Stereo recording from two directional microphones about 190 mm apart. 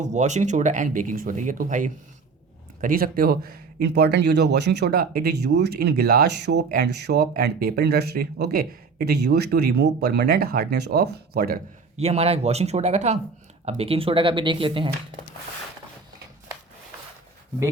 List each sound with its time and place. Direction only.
0.0 s speech: 40° right (ahead or behind)
11.9 s speech: 35° right (ahead or behind)